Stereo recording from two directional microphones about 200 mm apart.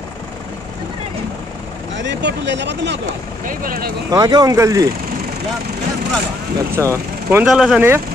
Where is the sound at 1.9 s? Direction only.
60° right (ahead or behind).